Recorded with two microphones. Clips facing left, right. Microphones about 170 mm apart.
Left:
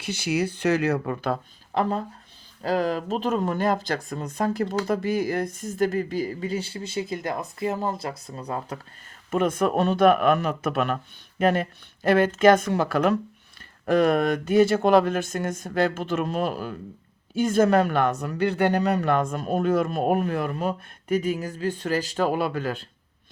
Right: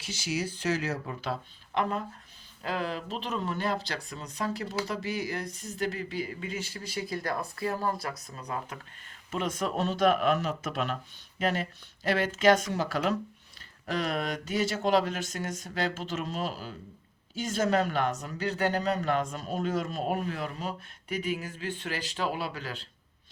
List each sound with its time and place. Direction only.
0.0 s speech: 60° left (ahead or behind)
1.7 s speech: 35° left (ahead or behind)
9.3 s speech: 55° left (ahead or behind)